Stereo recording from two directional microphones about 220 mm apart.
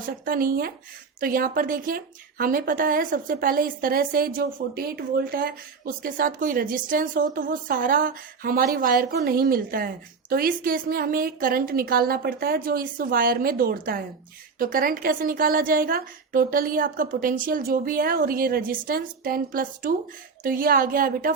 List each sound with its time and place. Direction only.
0.3 s speech: 40° right (ahead or behind)